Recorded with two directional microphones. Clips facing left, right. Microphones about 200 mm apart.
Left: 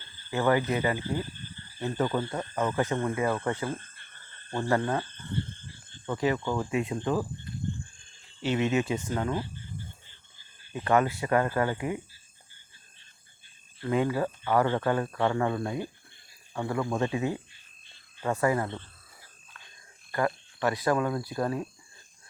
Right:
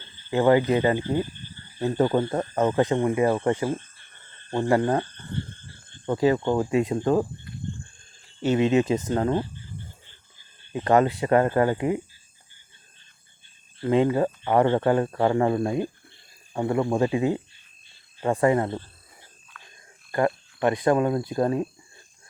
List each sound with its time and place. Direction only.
0.3 s speech: 20° right (ahead or behind)
2.8 s speech: 15° right (ahead or behind)
6.1 s speech: 35° right (ahead or behind)
8.5 s speech: 30° right (ahead or behind)
10.7 s speech: 35° right (ahead or behind)
13.8 s speech: 25° right (ahead or behind)
19.6 s a sound: 30° left (ahead or behind)
20.1 s speech: 25° right (ahead or behind)